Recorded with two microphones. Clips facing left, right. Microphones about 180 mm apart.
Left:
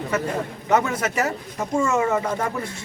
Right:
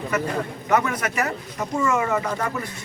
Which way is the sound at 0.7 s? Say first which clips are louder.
Left 1 dB; 25° left (ahead or behind).